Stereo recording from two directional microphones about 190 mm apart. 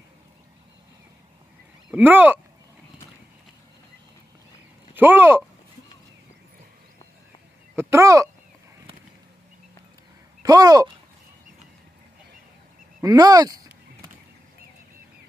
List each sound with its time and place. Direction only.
1.9 s a child's voice: 10° right (ahead or behind)
4.9 s a child's voice: 10° right (ahead or behind)
7.7 s a child's voice: 15° right (ahead or behind)
10.4 s speech: 20° right (ahead or behind)
13.0 s speech: 20° right (ahead or behind)